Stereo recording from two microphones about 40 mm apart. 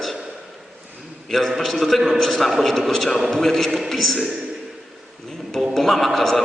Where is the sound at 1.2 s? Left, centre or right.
Centre.